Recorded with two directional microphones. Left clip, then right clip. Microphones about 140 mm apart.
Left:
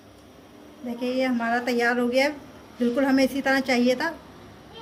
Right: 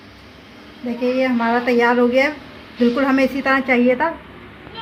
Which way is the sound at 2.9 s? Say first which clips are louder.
Right 2 dB; 25° right (ahead or behind).